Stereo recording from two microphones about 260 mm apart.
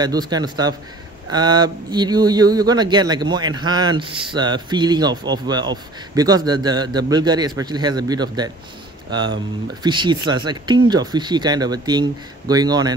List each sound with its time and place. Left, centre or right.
0.0 s speech: centre